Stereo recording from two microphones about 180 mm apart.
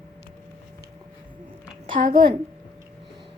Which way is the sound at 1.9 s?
50° right (ahead or behind).